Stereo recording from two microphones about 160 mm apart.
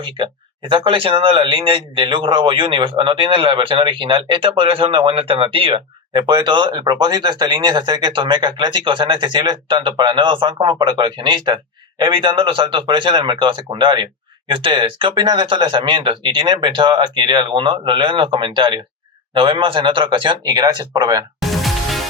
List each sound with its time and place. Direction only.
0.7 s speech: 35° right (ahead or behind)
21.5 s music: centre (ahead or behind)